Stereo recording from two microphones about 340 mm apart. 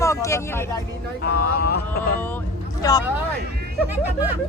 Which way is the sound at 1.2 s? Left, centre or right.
Left.